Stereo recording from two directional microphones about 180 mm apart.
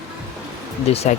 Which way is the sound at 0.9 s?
35° left (ahead or behind).